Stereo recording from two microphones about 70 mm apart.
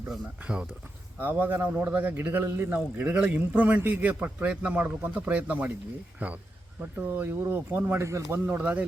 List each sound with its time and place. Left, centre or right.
1.2 s a man's voice: right
3.0 s a man's voice: right
7.1 s a man's voice: right
7.9 s speech: right
8.4 s a man's voice: right